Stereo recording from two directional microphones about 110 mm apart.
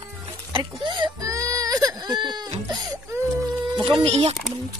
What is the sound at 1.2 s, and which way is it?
Baby cry, 30° right (ahead or behind).